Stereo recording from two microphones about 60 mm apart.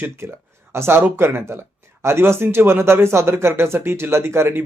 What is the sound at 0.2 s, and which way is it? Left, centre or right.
Speech, right.